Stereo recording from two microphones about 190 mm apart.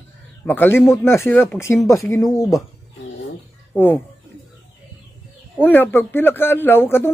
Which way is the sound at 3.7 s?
10° left (ahead or behind).